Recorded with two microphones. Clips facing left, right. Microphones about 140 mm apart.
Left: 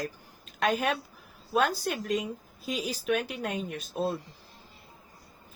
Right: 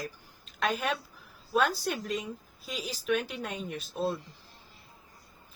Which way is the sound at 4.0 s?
10° left (ahead or behind).